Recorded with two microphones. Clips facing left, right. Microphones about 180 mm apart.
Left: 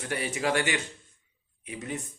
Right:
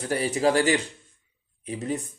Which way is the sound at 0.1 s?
35° right (ahead or behind).